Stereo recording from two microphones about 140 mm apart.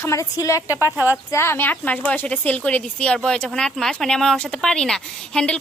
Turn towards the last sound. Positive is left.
turn(degrees=5)  # may be behind; listen again after turning